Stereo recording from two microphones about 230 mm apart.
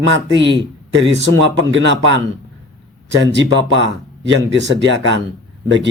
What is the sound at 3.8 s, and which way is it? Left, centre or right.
A man's voice, right.